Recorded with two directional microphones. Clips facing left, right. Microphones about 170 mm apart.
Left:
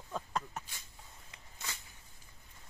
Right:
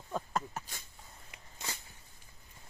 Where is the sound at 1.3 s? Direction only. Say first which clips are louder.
Right 3 dB; 20° right (ahead or behind).